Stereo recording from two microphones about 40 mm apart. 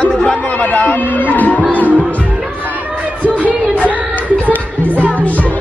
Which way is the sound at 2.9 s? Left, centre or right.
Right.